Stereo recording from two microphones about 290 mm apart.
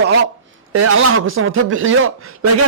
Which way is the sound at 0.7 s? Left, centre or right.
Right.